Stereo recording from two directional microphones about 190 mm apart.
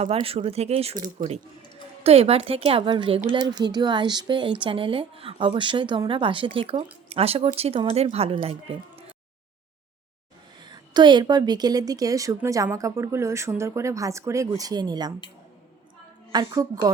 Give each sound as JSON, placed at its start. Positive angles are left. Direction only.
{"t": 0.0, "sound": "speech", "side_deg": -30}
{"t": 2.0, "sound": "speech", "side_deg": -30}
{"t": 10.6, "sound": "speech", "side_deg": -25}
{"t": 16.3, "sound": "speech", "side_deg": -20}